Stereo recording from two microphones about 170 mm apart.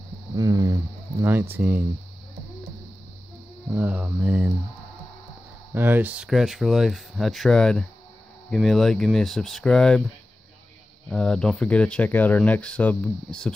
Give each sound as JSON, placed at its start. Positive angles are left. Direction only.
{"t": 0.4, "sound": "a sound", "side_deg": -20}
{"t": 1.3, "sound": "music", "side_deg": -10}
{"t": 3.7, "sound": "music", "side_deg": -10}
{"t": 5.8, "sound": "speech", "side_deg": -10}
{"t": 11.1, "sound": "speech", "side_deg": 5}